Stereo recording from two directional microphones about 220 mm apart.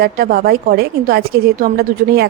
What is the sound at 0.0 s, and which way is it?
A woman's voice, 40° right (ahead or behind).